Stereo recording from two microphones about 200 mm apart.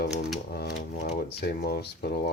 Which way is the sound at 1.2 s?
55° left (ahead or behind).